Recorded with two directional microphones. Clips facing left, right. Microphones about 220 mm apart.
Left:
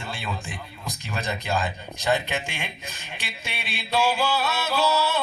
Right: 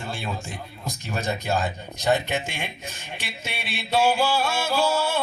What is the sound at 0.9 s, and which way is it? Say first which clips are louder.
Speech: right 3 dB; 40° right (ahead or behind).